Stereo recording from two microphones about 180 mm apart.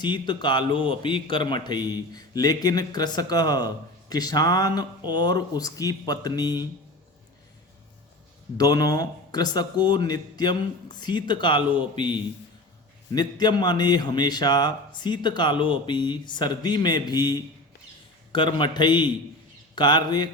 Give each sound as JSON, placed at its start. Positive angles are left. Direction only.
{"t": 0.0, "sound": "a man's voice", "side_deg": 25}
{"t": 8.5, "sound": "a man's voice", "side_deg": 20}